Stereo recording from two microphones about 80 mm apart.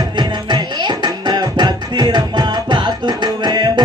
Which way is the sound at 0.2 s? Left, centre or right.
Right.